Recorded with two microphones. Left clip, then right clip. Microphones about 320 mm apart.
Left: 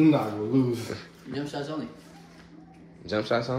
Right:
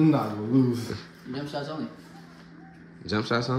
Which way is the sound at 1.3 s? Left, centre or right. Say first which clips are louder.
Even; right.